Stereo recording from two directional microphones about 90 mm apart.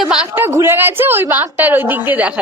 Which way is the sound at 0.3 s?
25° right (ahead or behind).